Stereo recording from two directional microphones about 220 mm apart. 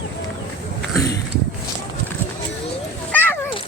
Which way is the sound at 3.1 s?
10° left (ahead or behind).